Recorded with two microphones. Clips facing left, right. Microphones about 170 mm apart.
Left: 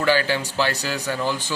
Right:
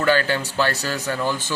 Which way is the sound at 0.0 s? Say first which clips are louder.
Right 1 dB; 10° left (ahead or behind).